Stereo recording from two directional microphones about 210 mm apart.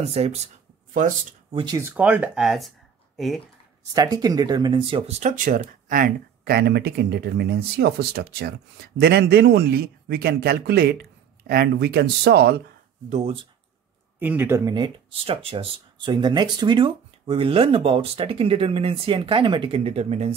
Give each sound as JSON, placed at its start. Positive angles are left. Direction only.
{"t": 0.0, "sound": "speech", "side_deg": -30}
{"t": 1.6, "sound": "speech", "side_deg": -15}
{"t": 3.9, "sound": "speech", "side_deg": -20}
{"t": 13.1, "sound": "speech", "side_deg": -30}
{"t": 14.2, "sound": "speech", "side_deg": -10}